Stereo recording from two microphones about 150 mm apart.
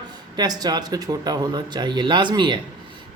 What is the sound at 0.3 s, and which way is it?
Speech, 25° right (ahead or behind).